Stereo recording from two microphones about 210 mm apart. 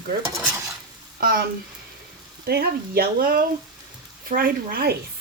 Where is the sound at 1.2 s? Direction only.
45° right (ahead or behind).